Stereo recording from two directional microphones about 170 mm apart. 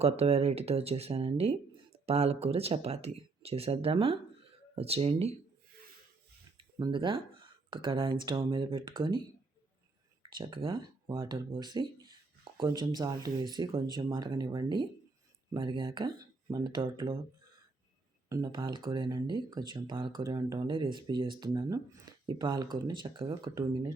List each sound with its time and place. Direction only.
0.0 s speech: 35° right (ahead or behind)
6.6 s speech: 25° right (ahead or behind)
10.2 s speech: 30° right (ahead or behind)
18.3 s speech: 20° right (ahead or behind)